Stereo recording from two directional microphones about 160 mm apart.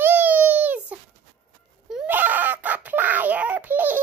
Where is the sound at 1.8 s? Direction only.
10° right (ahead or behind).